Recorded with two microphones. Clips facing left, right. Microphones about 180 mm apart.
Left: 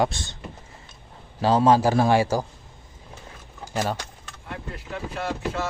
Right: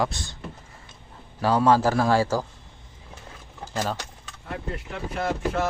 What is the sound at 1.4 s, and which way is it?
A man's voice, 25° left (ahead or behind).